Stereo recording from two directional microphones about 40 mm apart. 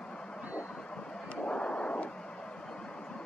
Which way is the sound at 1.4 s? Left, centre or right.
Left.